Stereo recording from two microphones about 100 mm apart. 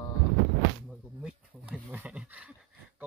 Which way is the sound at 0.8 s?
10° right (ahead or behind).